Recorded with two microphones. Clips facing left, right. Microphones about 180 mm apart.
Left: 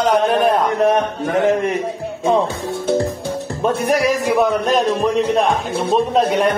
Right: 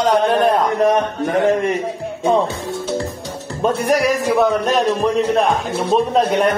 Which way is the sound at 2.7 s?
55° left (ahead or behind).